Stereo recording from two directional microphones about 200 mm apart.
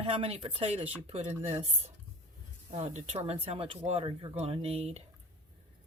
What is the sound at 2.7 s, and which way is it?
Speech, 35° right (ahead or behind).